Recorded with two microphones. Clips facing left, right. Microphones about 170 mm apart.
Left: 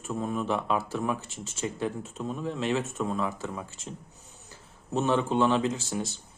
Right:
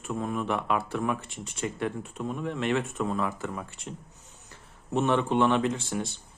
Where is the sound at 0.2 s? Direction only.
5° left (ahead or behind).